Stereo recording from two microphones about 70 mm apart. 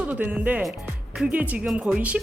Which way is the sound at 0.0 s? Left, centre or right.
Right.